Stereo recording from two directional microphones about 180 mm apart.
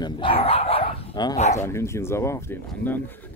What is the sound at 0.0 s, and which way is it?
Dog, 25° left (ahead or behind).